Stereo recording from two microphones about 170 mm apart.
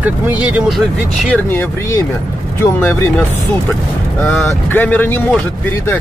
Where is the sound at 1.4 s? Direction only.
15° left (ahead or behind).